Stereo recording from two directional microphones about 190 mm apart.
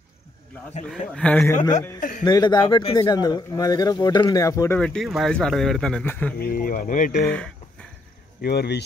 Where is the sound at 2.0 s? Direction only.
45° left (ahead or behind).